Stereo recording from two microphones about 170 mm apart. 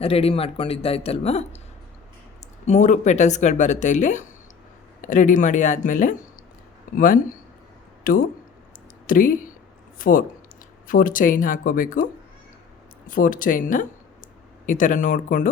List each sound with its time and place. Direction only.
0.0 s a man's voice: 35° left (ahead or behind)
2.6 s speech: 45° left (ahead or behind)
13.1 s speech: 55° left (ahead or behind)